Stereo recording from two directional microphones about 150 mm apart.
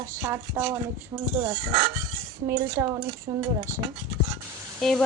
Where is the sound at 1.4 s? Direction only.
30° right (ahead or behind).